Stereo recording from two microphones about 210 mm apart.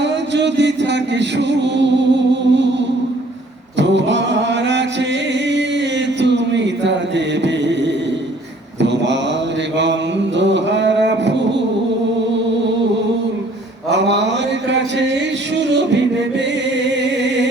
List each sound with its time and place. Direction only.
0.0 s music: 55° right (ahead or behind)
3.8 s chant: 60° right (ahead or behind)
7.4 s a sound: 55° right (ahead or behind)
8.8 s mantra: 55° right (ahead or behind)
9.7 s a sound: 60° right (ahead or behind)
13.9 s mantra: 55° right (ahead or behind)
15.5 s music: 55° right (ahead or behind)